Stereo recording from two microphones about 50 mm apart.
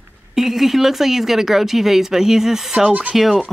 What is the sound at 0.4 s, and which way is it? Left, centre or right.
Speech, centre.